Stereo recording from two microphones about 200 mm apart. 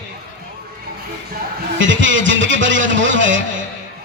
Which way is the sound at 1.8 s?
70° right (ahead or behind).